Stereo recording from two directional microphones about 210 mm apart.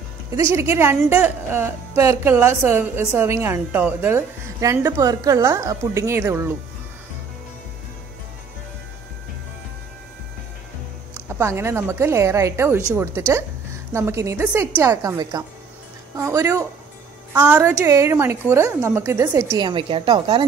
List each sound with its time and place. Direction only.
0.4 s a woman's voice: 10° right (ahead or behind)
11.2 s a woman's voice: 10° right (ahead or behind)
19.6 s a woman's voice: 25° right (ahead or behind)